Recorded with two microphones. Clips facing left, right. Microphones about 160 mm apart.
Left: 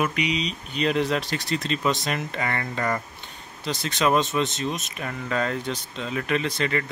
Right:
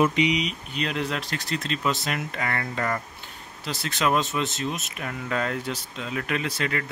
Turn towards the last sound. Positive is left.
turn(degrees=-5)  # may be behind; listen again after turning